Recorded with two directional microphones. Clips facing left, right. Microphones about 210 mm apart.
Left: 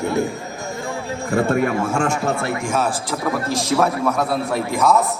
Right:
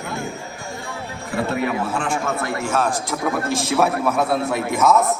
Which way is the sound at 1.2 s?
45° left (ahead or behind).